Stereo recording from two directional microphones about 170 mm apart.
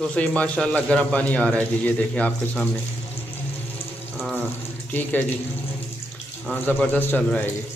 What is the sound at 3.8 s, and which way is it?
Rain on surface, 30° left (ahead or behind).